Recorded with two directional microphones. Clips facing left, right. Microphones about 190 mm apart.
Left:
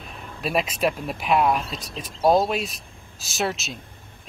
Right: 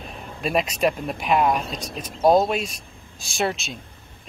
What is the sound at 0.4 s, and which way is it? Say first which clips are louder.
Speech: right 2 dB; 5° left (ahead or behind).